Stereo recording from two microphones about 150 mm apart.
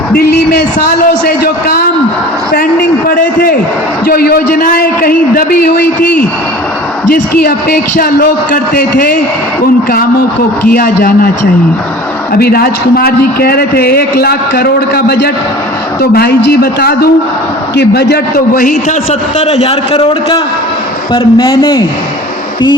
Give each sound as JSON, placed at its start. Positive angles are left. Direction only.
{"t": 3.2, "sound": "a man's voice", "side_deg": 70}
{"t": 4.0, "sound": "a man's voice", "side_deg": 85}
{"t": 4.5, "sound": "a man's voice", "side_deg": 75}
{"t": 7.1, "sound": "a man's voice", "side_deg": 75}
{"t": 10.7, "sound": "a man's voice", "side_deg": 80}
{"t": 12.3, "sound": "a man's voice", "side_deg": 90}
{"t": 19.4, "sound": "a man's voice", "side_deg": 40}